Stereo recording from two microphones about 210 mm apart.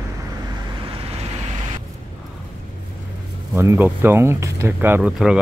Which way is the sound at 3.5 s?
10° right (ahead or behind).